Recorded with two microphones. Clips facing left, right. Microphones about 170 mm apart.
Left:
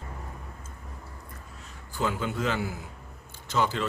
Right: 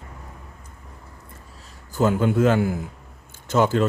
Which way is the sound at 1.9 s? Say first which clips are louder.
Right 10 dB; 45° right (ahead or behind).